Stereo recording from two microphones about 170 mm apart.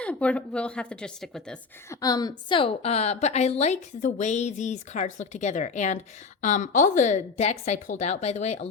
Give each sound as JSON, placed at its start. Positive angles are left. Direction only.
{"t": 0.0, "sound": "a woman's voice", "side_deg": 5}
{"t": 1.9, "sound": "a woman's voice", "side_deg": 20}